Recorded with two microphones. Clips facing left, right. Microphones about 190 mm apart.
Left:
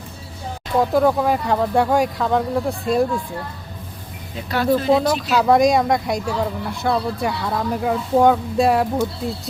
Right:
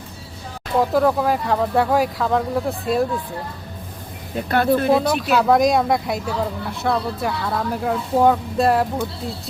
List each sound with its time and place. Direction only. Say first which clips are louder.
0.8 s speech: left 1 dB; centre (ahead or behind)
4.4 s speech: right 1 dB; 55° right (ahead or behind)
5.3 s speech: left 1 dB; centre (ahead or behind)